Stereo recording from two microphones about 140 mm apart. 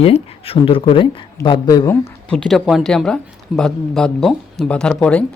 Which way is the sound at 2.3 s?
Centre (ahead or behind).